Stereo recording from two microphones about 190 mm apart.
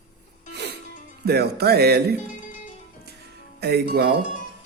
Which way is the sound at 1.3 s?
55° right (ahead or behind).